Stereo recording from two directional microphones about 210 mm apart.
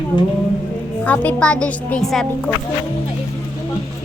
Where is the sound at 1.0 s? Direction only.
5° left (ahead or behind).